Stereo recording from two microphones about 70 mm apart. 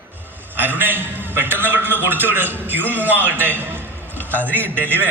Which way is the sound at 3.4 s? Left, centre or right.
Right.